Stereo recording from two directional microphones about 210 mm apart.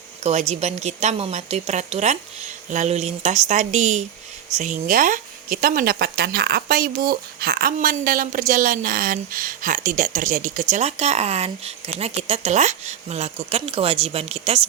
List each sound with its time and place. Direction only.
0.3 s speech: 30° right (ahead or behind)